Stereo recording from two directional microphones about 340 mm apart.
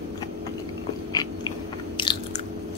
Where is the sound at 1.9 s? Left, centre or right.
Centre.